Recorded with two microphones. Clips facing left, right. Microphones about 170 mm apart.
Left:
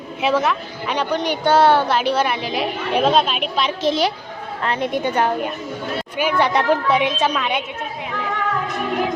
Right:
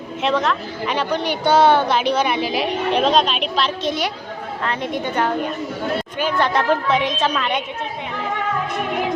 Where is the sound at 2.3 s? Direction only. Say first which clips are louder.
Right 2 dB; 5° right (ahead or behind).